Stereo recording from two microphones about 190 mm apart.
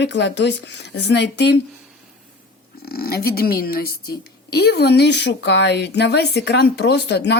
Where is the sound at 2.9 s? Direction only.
55° left (ahead or behind).